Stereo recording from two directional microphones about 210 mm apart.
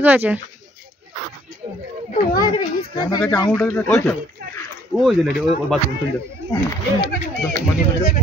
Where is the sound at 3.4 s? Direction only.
10° left (ahead or behind).